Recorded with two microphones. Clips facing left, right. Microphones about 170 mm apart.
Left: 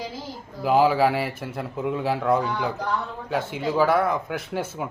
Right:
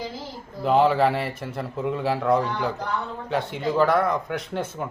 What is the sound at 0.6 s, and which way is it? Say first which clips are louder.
A man's voice: even; 5° left (ahead or behind).